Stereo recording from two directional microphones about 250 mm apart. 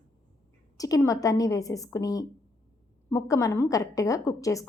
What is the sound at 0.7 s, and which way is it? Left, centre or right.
A woman's voice, centre.